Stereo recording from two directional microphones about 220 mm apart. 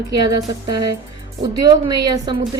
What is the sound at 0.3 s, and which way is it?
A woman's voice, 15° right (ahead or behind).